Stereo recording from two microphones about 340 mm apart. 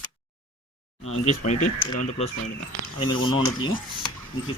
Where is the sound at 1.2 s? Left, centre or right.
Centre.